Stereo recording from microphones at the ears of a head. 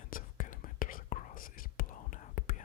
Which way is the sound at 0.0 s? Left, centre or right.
Left.